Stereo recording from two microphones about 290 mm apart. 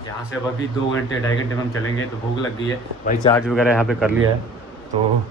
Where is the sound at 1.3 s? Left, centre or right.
Left.